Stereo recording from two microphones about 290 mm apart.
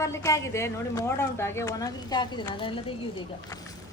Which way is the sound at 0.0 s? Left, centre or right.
Centre.